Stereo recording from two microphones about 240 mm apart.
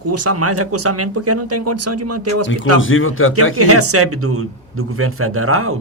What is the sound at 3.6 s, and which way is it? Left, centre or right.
Speech, right.